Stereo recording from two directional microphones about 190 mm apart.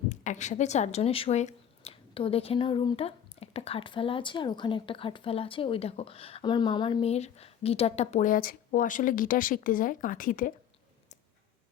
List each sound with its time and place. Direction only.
0.1 s speech: 40° left (ahead or behind)